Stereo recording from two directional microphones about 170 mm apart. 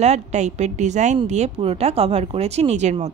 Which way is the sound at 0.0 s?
40° right (ahead or behind).